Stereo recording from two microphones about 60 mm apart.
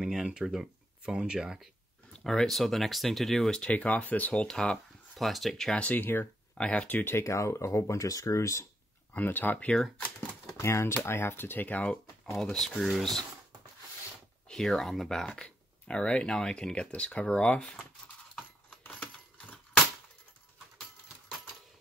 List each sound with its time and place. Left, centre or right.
0.0 s speech: centre
2.2 s speech: centre
3.6 s speech: left
5.1 s speech: centre
5.8 s speech: left
6.6 s speech: left
7.2 s speech: left
9.1 s speech: left
10.6 s speech: left
11.1 s speech: left
12.4 s speech: centre
14.5 s speech: centre